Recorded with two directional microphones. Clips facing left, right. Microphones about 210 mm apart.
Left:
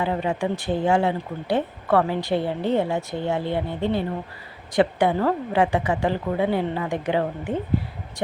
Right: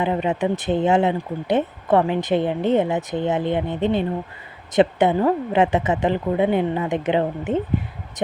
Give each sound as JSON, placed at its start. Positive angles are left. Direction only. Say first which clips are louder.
{"t": 0.0, "sound": "speech", "louder": "right 3 dB", "side_deg": -20}